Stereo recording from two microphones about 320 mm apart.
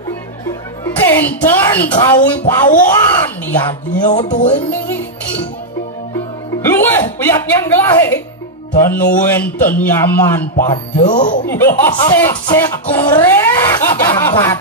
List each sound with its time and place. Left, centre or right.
1.0 s a woman's voice: centre
4.1 s speech: left
4.6 s music: centre
6.6 s a woman's voice: centre
11.0 s speech: left
11.4 s a woman's voice: centre